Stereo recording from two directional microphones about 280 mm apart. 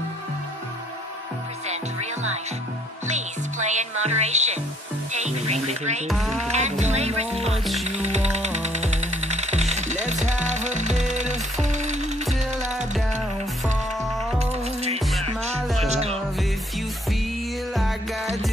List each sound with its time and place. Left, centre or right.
3.1 s music: right
6.0 s speech: centre
6.4 s music: right
14.4 s music: right
15.6 s music: centre
15.9 s music: right